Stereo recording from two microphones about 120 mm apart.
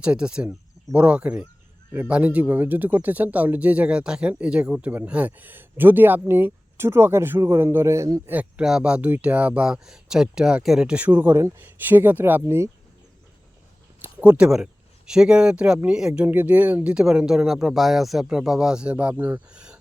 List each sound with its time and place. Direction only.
0.0 s speech: 10° right (ahead or behind); by 8.2 s 25° right (ahead or behind)
8.3 s speech: 10° right (ahead or behind)
14.0 s speech: 15° right (ahead or behind)